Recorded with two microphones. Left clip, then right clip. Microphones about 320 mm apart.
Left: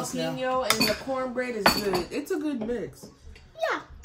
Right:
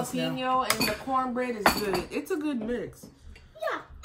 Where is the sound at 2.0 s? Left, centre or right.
Centre.